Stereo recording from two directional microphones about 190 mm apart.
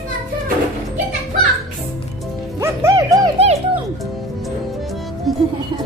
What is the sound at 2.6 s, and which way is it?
Music, 15° right (ahead or behind).